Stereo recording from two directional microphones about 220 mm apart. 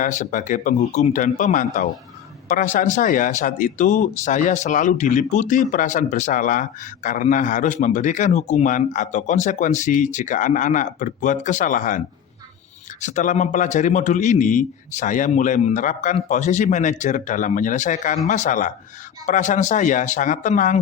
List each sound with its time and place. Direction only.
0.0 s speech: 35° left (ahead or behind)